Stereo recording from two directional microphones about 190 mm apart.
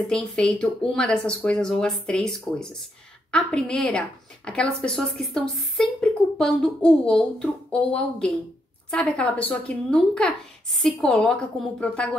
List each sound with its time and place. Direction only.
0.1 s speech: 5° left (ahead or behind)